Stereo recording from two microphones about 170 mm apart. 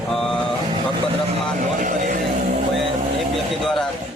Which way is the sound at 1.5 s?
50° right (ahead or behind).